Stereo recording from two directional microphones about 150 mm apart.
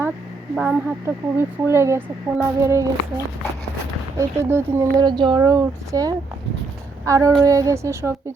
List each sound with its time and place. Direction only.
0.5 s speech: 5° right (ahead or behind)
1.0 s a woman's voice: 15° right (ahead or behind)